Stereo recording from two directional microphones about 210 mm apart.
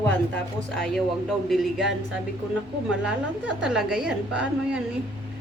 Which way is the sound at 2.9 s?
5° right (ahead or behind).